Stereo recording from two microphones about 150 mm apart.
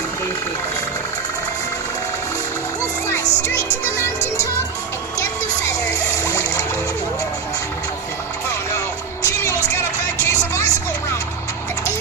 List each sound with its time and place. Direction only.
3.1 s music: 15° left (ahead or behind)
5.9 s splash: 20° left (ahead or behind)
9.2 s music: 20° left (ahead or behind)
10.2 s vehicle: 20° left (ahead or behind)